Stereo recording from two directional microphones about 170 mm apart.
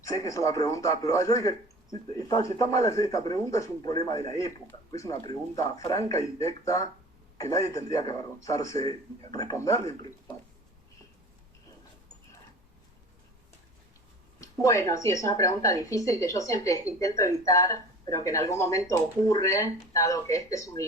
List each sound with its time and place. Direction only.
0.0 s a woman's voice: 20° left (ahead or behind)
14.4 s a woman's voice: 20° left (ahead or behind)